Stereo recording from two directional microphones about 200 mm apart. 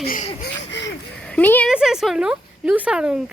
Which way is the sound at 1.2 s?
5° left (ahead or behind).